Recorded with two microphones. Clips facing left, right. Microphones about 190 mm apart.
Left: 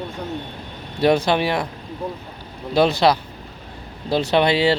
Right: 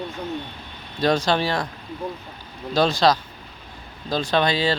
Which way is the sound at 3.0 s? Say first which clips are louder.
Even; 15° left (ahead or behind).